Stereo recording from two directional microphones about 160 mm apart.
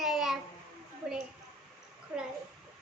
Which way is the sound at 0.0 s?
Centre (ahead or behind).